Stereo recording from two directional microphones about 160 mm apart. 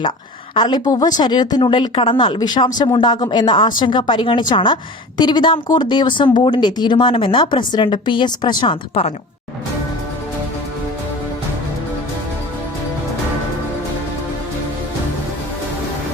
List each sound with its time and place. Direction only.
0.5 s a woman's voice: 30° left (ahead or behind)